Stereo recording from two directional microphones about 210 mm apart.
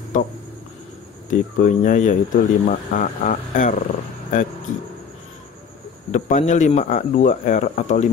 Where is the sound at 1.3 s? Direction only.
40° left (ahead or behind).